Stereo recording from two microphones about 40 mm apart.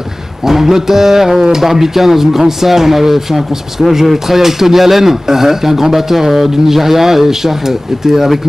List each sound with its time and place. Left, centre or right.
0.5 s speech: centre